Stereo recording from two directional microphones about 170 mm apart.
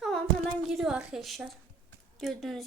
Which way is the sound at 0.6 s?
Centre (ahead or behind).